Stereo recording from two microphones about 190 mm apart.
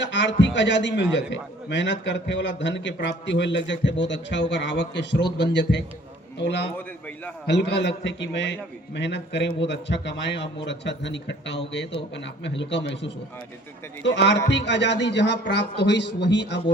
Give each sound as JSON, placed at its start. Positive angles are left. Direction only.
{"t": 0.0, "sound": "a man's voice", "side_deg": 70}